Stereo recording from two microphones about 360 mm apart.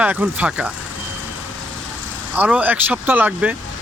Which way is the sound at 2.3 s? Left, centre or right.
Centre.